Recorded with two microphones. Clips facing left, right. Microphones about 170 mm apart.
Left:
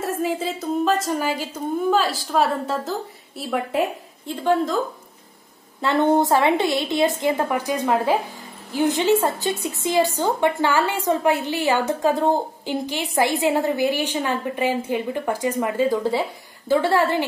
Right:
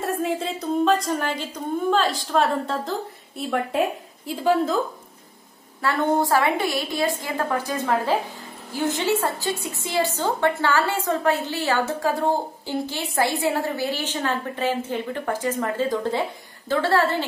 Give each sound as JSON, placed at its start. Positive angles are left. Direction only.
{"t": 0.0, "sound": "a woman's voice", "side_deg": 0}
{"t": 5.8, "sound": "a woman's voice", "side_deg": 20}